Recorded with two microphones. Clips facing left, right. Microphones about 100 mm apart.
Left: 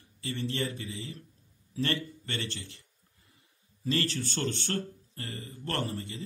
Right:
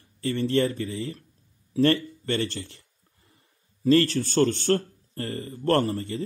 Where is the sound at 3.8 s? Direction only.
45° right (ahead or behind).